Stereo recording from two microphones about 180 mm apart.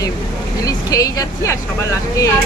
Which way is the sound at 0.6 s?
20° left (ahead or behind).